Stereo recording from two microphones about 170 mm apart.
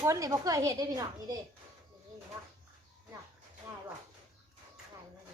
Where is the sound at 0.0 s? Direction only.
20° right (ahead or behind).